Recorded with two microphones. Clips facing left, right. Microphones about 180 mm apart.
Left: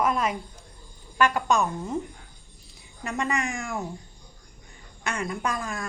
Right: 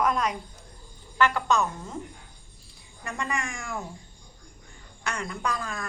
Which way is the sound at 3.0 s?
20° left (ahead or behind).